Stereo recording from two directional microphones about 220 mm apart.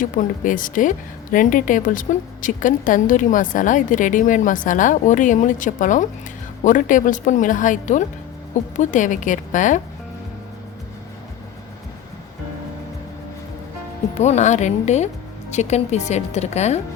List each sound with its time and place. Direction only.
0.0 s speech: 35° left (ahead or behind)
14.2 s speech: 30° left (ahead or behind)